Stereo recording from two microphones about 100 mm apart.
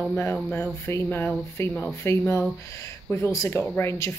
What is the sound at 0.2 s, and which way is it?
Speech, 25° left (ahead or behind).